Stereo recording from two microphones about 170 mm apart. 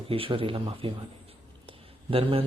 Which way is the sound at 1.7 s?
30° right (ahead or behind).